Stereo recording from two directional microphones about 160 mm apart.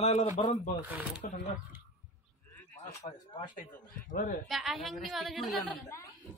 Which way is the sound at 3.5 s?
55° left (ahead or behind).